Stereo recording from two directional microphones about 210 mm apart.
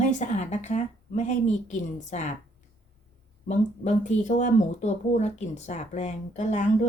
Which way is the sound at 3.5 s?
35° left (ahead or behind).